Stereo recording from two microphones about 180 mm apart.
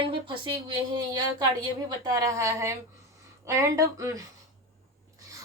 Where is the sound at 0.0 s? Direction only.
30° right (ahead or behind).